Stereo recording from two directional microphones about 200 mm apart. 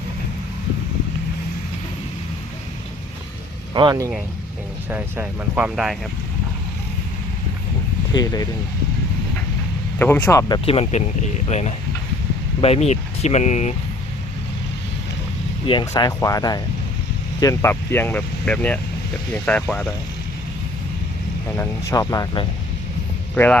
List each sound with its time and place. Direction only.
3.8 s speech: 20° right (ahead or behind)
4.9 s speech: 10° right (ahead or behind)
8.1 s speech: 20° left (ahead or behind)
10.0 s speech: 10° left (ahead or behind)
10.5 s speech: 30° left (ahead or behind)
15.6 s speech: 25° left (ahead or behind); by 19.9 s 5° left (ahead or behind)
21.6 s speech: 15° left (ahead or behind)
23.3 s speech: 5° left (ahead or behind)